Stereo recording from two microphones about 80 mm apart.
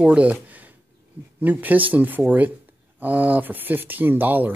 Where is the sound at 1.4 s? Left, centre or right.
Right.